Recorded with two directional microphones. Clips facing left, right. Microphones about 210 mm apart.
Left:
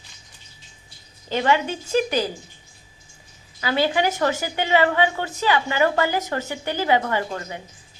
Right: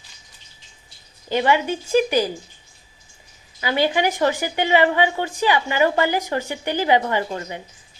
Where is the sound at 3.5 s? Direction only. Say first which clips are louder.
Right 1 dB; 15° right (ahead or behind).